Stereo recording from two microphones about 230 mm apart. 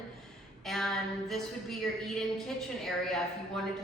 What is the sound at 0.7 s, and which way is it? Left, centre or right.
A woman's voice, centre.